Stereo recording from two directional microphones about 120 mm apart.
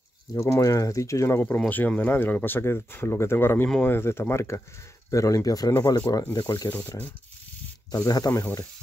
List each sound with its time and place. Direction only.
0.3 s speech: 25° left (ahead or behind)
8.3 s speech: 15° left (ahead or behind)